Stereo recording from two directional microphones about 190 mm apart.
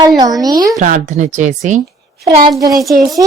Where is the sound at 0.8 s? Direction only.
40° right (ahead or behind).